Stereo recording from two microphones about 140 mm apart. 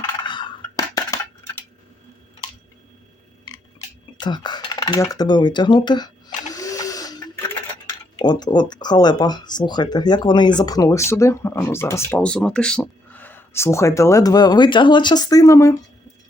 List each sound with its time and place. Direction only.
0.3 s a sound: 35° left (ahead or behind)
4.2 s dishes: 30° left (ahead or behind)
8.1 s speech: 30° left (ahead or behind)
12.2 s speech: 5° left (ahead or behind); by 15.7 s 25° left (ahead or behind)